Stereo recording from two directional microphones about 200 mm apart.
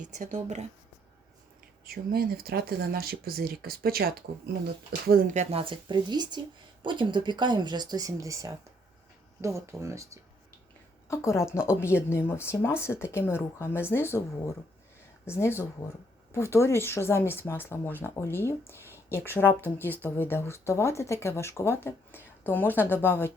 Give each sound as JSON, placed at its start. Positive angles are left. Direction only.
{"t": 0.0, "sound": "speech", "side_deg": -40}
{"t": 1.8, "sound": "speech", "side_deg": -50}
{"t": 11.1, "sound": "speech", "side_deg": 15}